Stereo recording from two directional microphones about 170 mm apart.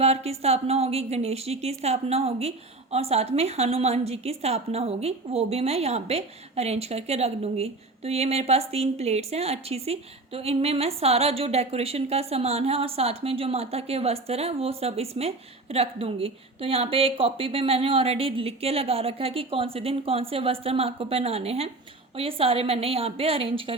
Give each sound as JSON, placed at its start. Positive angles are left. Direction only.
{"t": 0.0, "sound": "a woman's voice", "side_deg": -35}